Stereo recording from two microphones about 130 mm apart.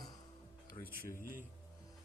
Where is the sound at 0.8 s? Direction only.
50° left (ahead or behind).